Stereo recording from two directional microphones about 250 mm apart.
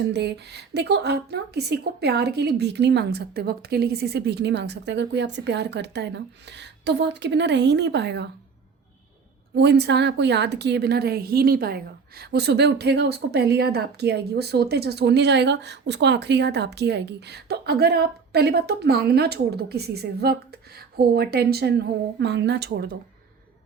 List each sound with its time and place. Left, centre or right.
0.1 s a woman's voice: right
9.6 s a woman's voice: right